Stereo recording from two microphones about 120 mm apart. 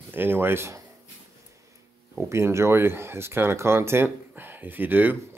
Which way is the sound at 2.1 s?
25° right (ahead or behind).